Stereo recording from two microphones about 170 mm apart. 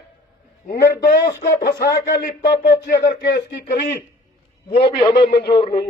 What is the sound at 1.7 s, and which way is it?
Speech, 20° left (ahead or behind).